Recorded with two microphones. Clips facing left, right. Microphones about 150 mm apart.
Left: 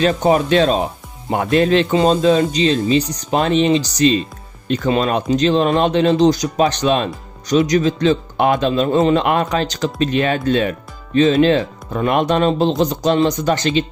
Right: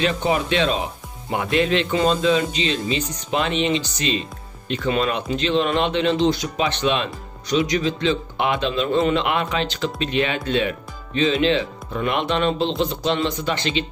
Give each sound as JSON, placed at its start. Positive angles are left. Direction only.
{"t": 0.0, "sound": "speech", "side_deg": 40}